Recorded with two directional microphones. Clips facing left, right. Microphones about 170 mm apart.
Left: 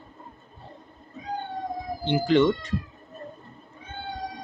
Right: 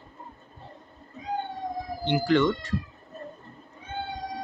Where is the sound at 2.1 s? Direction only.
20° left (ahead or behind).